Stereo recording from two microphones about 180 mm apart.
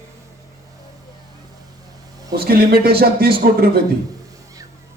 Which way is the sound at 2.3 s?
55° right (ahead or behind).